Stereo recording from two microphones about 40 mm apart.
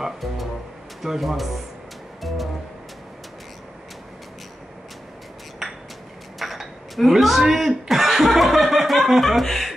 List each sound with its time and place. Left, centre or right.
1.0 s speech: centre
5.6 s a sound: centre
6.4 s chuckle: centre